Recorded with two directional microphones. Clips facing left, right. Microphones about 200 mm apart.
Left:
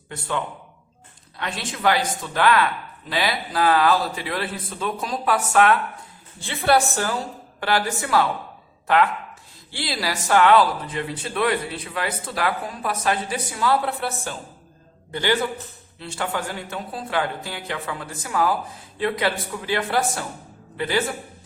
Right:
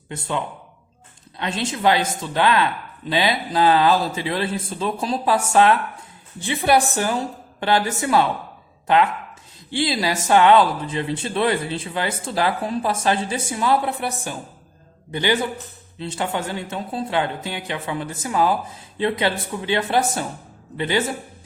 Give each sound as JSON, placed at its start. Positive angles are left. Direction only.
{"t": 0.1, "sound": "a man's voice", "side_deg": -20}
{"t": 6.4, "sound": "a man's voice", "side_deg": -15}
{"t": 9.6, "sound": "a man's voice", "side_deg": -20}